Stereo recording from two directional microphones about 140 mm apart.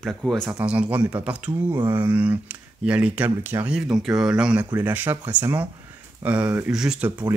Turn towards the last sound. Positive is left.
turn(degrees=-5)  # may be behind; listen again after turning